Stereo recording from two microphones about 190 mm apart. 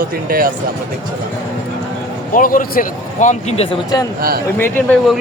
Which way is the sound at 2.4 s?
45° left (ahead or behind).